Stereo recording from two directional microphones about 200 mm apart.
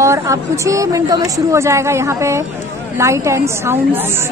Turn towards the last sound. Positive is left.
turn(degrees=-10)  # may be behind; listen again after turning